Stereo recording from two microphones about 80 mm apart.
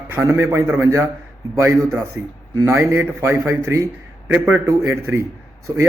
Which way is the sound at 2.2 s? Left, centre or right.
Right.